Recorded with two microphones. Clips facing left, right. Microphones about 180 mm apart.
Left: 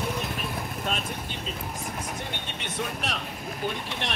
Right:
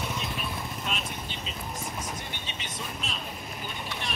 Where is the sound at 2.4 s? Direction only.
70° left (ahead or behind).